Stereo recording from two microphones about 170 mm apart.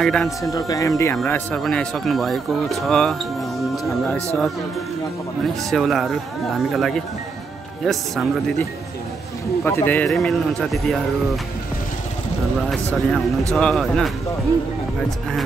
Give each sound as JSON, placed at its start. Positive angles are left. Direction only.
{"t": 0.0, "sound": "speech", "side_deg": 5}
{"t": 0.4, "sound": "speech", "side_deg": 20}
{"t": 1.1, "sound": "speech", "side_deg": 5}
{"t": 5.7, "sound": "speech", "side_deg": 0}
{"t": 9.7, "sound": "speech", "side_deg": 10}
{"t": 12.6, "sound": "speech", "side_deg": 0}